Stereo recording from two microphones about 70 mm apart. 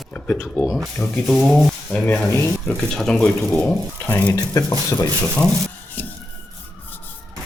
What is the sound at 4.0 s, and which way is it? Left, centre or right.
Speech, left.